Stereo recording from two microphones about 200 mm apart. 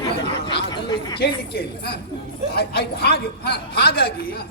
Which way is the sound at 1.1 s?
55° left (ahead or behind).